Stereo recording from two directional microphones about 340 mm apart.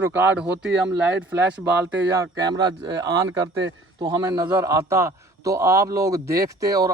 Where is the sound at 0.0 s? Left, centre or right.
Centre.